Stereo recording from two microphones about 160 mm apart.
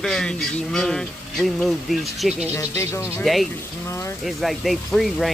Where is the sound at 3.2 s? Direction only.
Centre (ahead or behind).